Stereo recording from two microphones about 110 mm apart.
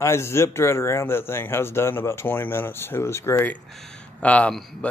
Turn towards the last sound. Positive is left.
turn(degrees=10)  # may be behind; listen again after turning